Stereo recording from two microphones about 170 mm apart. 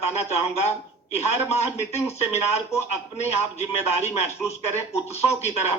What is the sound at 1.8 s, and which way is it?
A man's voice, 40° left (ahead or behind).